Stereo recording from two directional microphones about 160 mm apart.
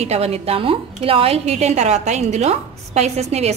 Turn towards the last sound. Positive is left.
turn(degrees=-40)  # may be behind; listen again after turning